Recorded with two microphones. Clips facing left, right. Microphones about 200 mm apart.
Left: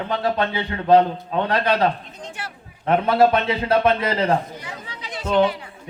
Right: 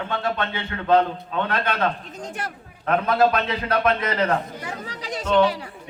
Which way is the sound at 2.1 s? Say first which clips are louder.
Right 3 dB; 45° right (ahead or behind).